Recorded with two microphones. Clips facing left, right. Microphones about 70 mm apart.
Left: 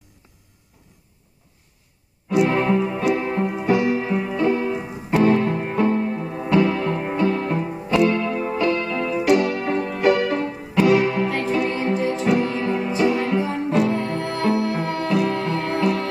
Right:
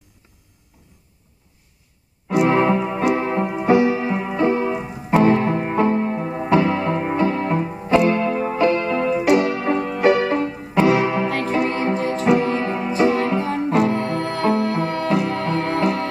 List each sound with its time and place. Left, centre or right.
2.4 s keyboard: right
3.2 s music: right
14.9 s music: right